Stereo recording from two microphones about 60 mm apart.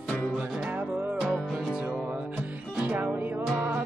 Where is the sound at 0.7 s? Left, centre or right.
Right.